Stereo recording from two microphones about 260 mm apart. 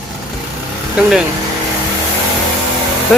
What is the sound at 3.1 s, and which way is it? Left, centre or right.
Speech, centre.